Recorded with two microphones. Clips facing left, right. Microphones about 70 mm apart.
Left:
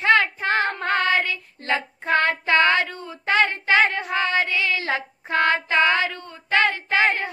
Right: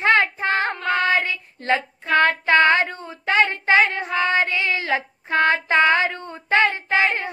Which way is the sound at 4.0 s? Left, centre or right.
Right.